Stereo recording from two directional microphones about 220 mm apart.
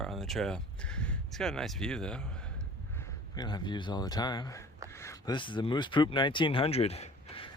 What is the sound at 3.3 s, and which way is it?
Speech, 20° left (ahead or behind).